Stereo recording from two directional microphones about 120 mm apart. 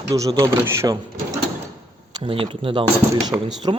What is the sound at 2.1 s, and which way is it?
Speech, 50° right (ahead or behind).